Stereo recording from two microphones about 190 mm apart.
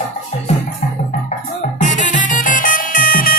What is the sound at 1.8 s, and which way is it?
Music, 40° left (ahead or behind).